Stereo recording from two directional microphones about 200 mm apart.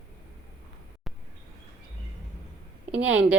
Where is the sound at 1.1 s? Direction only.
Centre (ahead or behind).